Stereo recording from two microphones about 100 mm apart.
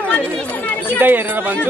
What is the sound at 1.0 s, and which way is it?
Speech, 20° right (ahead or behind).